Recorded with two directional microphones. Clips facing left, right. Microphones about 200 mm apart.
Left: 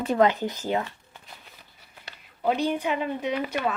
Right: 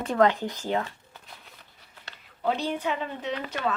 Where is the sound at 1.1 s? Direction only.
Centre (ahead or behind).